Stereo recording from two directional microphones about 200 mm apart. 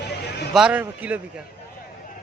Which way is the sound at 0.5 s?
5° right (ahead or behind).